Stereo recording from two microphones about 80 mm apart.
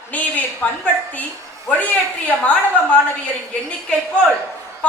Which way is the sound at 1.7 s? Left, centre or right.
Left.